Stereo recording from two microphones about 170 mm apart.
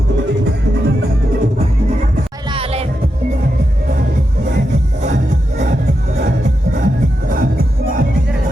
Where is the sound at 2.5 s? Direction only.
35° right (ahead or behind).